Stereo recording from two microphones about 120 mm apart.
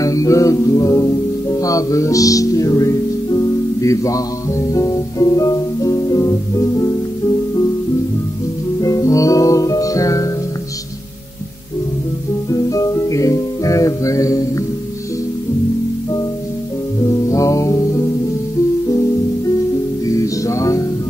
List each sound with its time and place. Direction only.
0.0 s music: 30° left (ahead or behind)
3.8 s speech: 25° left (ahead or behind)
8.8 s music: 25° left (ahead or behind)
12.4 s music: 30° left (ahead or behind)
17.3 s music: 25° left (ahead or behind)
20.1 s music: 25° left (ahead or behind)